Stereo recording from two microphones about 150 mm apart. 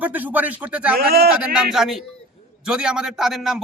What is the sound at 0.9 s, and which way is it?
Speech, 90° right.